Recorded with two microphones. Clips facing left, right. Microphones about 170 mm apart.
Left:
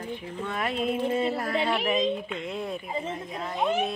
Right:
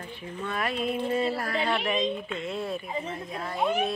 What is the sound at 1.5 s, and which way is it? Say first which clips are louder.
Speech: left 1 dB; 5° left (ahead or behind).